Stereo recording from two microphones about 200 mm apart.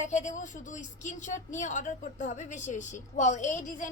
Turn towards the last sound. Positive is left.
turn(degrees=40)  # may be behind; listen again after turning